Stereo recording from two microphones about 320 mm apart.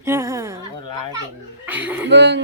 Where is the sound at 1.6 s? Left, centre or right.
Centre.